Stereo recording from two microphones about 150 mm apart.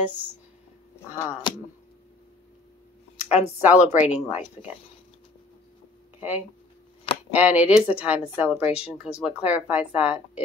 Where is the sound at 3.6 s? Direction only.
10° right (ahead or behind).